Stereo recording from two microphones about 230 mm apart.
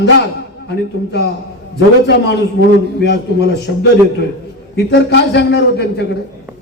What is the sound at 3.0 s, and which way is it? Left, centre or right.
A man's voice, left.